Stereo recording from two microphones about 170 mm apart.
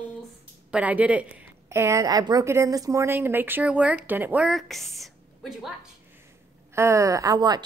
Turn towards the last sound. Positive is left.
turn(degrees=-25)  # may be behind; listen again after turning